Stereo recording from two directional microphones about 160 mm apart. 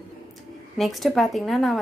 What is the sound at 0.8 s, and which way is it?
Speech, centre (ahead or behind).